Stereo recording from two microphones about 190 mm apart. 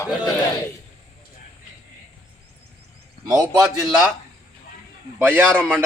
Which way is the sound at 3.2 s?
20° right (ahead or behind).